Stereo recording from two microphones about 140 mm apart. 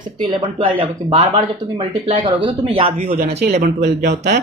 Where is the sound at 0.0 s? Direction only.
35° right (ahead or behind).